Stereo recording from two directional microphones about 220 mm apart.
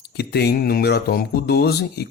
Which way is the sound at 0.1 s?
45° left (ahead or behind).